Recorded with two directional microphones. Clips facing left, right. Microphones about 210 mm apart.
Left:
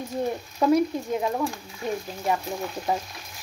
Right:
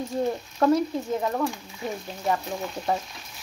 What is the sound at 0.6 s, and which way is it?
A woman's voice, 10° left (ahead or behind).